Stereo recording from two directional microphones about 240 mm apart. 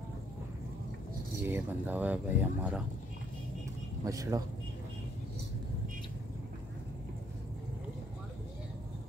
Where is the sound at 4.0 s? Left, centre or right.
Centre.